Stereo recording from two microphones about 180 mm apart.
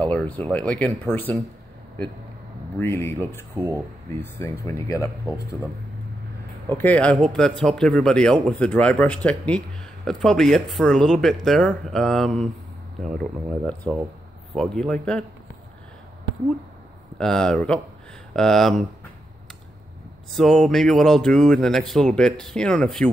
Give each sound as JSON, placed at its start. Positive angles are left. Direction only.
{"t": 0.0, "sound": "speech", "side_deg": 5}
{"t": 2.8, "sound": "speech", "side_deg": 15}
{"t": 3.5, "sound": "speech", "side_deg": -15}
{"t": 4.6, "sound": "speech", "side_deg": 20}
{"t": 6.7, "sound": "speech", "side_deg": 10}
{"t": 17.2, "sound": "speech", "side_deg": 5}
{"t": 20.2, "sound": "speech", "side_deg": 0}